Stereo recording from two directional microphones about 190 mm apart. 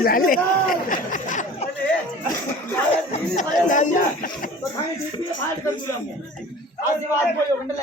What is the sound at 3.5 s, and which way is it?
Speech, 40° left (ahead or behind).